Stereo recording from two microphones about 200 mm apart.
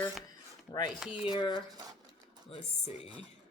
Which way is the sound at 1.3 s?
25° left (ahead or behind).